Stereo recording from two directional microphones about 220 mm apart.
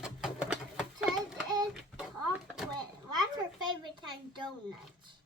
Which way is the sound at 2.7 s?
20° right (ahead or behind).